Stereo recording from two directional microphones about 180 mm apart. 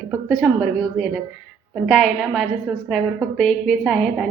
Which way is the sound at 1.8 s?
Centre (ahead or behind).